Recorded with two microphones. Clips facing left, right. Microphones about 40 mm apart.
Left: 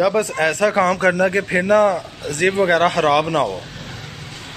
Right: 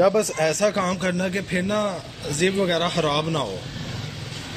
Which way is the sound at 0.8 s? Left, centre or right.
Left.